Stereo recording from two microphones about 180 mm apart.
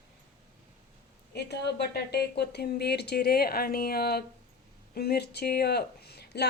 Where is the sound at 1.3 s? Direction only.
70° left (ahead or behind).